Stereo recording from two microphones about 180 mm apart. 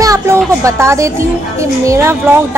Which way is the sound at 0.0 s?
20° right (ahead or behind).